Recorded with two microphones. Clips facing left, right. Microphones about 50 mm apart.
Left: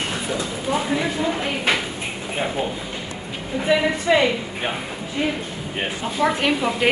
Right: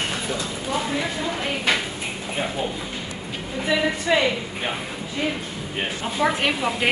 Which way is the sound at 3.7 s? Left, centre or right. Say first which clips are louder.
Left 3 dB; left.